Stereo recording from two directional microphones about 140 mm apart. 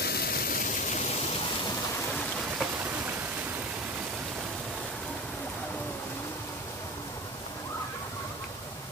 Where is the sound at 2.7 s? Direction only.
10° right (ahead or behind).